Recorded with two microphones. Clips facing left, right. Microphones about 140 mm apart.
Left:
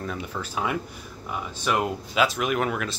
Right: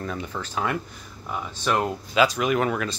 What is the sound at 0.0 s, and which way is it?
Speech, 5° left (ahead or behind).